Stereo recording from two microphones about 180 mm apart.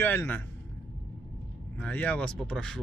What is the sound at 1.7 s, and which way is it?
Speech, 10° left (ahead or behind).